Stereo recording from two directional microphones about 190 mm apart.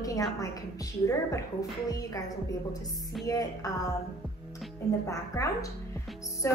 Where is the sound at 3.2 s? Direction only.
20° left (ahead or behind).